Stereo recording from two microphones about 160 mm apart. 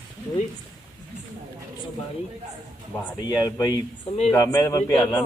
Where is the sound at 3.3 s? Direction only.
20° left (ahead or behind).